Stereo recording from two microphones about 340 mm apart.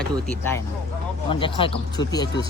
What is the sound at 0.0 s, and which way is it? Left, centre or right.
Speech, centre.